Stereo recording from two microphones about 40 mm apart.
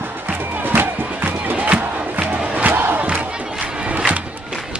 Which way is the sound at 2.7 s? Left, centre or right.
Right.